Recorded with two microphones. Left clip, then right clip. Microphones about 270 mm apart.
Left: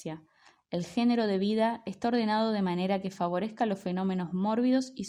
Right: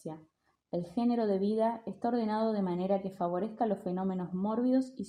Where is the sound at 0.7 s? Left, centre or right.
Left.